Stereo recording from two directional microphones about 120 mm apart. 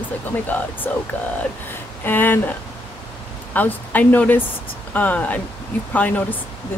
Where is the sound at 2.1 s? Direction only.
15° left (ahead or behind).